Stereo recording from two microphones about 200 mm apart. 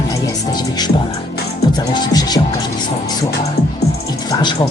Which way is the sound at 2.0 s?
20° left (ahead or behind).